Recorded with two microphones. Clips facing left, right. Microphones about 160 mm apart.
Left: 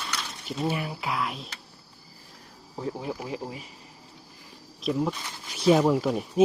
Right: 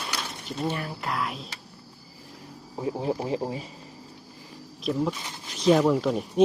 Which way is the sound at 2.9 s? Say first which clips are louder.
Right 6 dB; 30° right (ahead or behind).